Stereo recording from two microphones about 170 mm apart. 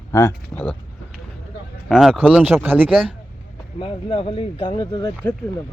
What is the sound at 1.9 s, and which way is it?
Speech, centre (ahead or behind).